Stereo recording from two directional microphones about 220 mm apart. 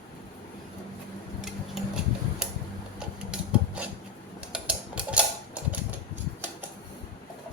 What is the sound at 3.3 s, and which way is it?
Filing, 5° right (ahead or behind).